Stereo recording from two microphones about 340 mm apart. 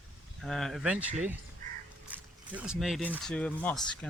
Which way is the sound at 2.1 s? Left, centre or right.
Centre.